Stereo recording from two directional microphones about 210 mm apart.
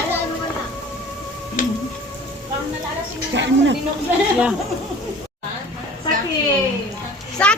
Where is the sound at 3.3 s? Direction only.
55° right (ahead or behind).